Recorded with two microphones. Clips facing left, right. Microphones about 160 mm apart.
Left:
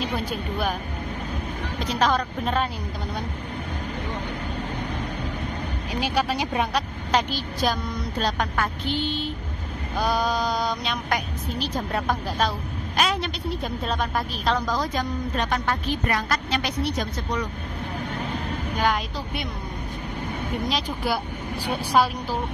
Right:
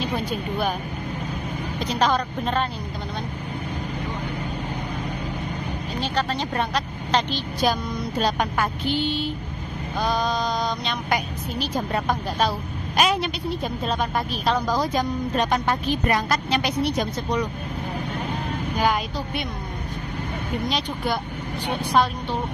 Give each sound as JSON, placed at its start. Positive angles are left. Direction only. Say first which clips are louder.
{"t": 0.0, "sound": "a woman's voice", "louder": "right 2 dB", "side_deg": 0}
{"t": 1.9, "sound": "a woman's voice", "louder": "right 1 dB", "side_deg": 0}
{"t": 5.9, "sound": "a woman's voice", "louder": "left 1 dB", "side_deg": 10}
{"t": 8.2, "sound": "a woman's voice", "louder": "right 2 dB", "side_deg": -10}
{"t": 9.9, "sound": "mantra", "louder": "even", "side_deg": 10}
{"t": 11.6, "sound": "a woman's voice", "louder": "right 2 dB", "side_deg": 0}
{"t": 18.8, "sound": "a woman's voice", "louder": "right 2 dB", "side_deg": -5}
{"t": 20.6, "sound": "a woman's voice", "louder": "even", "side_deg": 0}